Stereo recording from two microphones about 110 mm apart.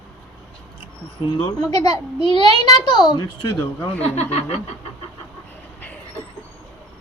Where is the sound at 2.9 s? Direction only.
40° left (ahead or behind).